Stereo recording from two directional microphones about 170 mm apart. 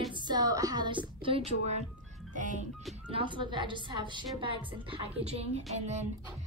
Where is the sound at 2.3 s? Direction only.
50° right (ahead or behind).